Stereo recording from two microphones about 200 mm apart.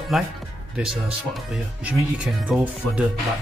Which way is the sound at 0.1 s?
Centre (ahead or behind).